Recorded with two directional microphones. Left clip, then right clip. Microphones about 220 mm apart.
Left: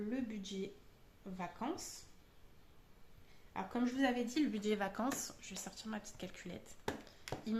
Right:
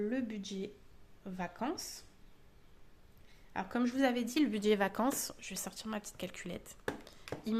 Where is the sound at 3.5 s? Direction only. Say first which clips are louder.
Right 4 dB; 50° right (ahead or behind).